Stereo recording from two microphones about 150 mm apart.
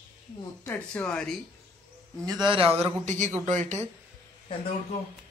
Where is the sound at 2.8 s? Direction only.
50° right (ahead or behind).